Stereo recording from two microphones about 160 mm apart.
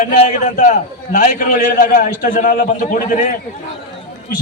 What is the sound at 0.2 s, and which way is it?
A man's voice, 50° left (ahead or behind).